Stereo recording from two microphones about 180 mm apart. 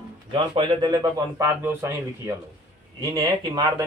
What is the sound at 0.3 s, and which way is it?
Speech, 25° right (ahead or behind).